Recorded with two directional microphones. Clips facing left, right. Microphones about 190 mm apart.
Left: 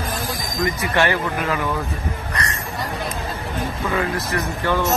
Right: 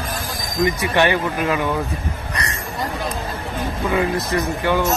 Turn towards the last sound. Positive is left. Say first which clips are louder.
# right 2 dB
turn(degrees=-15)  # may be behind; listen again after turning